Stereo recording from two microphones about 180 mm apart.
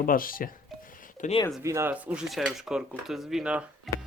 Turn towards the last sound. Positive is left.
turn(degrees=-5)  # may be behind; listen again after turning